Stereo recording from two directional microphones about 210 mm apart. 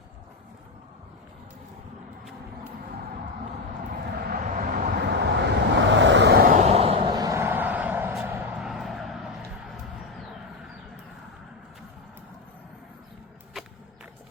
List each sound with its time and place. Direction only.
4.2 s vehicle: 40° right (ahead or behind); by 9.3 s centre (ahead or behind)